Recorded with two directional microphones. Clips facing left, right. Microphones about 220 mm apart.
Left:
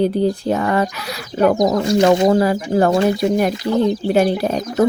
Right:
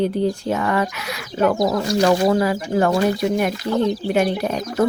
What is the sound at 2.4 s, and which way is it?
Speech, 35° left (ahead or behind).